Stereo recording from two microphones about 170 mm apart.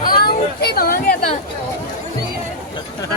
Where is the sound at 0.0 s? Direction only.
60° left (ahead or behind).